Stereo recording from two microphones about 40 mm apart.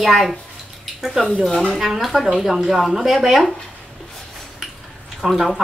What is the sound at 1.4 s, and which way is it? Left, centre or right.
Speech, centre.